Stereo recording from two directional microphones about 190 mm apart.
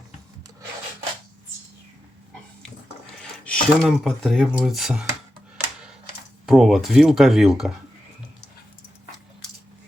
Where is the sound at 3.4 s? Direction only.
5° left (ahead or behind).